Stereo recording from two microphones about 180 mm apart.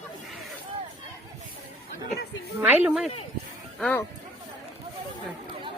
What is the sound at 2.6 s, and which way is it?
Speech, 10° right (ahead or behind).